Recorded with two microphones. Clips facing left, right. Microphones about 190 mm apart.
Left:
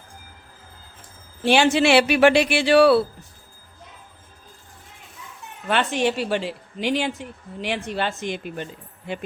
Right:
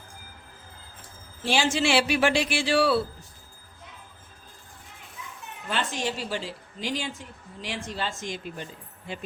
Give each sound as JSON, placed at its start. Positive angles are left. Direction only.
{"t": 1.4, "sound": "speech", "side_deg": 65}
{"t": 5.6, "sound": "speech", "side_deg": 65}